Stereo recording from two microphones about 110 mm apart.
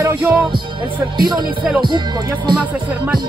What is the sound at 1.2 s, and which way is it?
Speech, 40° right (ahead or behind).